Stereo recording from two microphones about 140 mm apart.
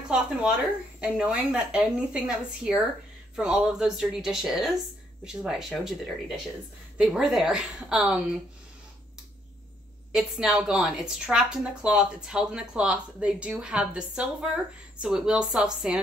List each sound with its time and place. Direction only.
1.0 s a woman's voice: 10° right (ahead or behind)
10.1 s speech: 5° right (ahead or behind)